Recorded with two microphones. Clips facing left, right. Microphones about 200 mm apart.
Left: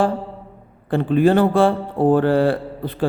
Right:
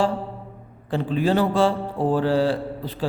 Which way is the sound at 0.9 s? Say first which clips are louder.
Left 6 dB; 55° left (ahead or behind).